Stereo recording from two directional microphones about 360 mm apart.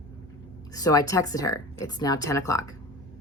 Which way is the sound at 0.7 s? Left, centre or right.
Centre.